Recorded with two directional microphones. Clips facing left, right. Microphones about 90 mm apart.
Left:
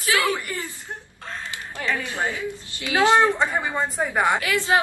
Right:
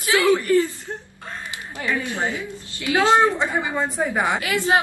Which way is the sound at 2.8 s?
20° left (ahead or behind).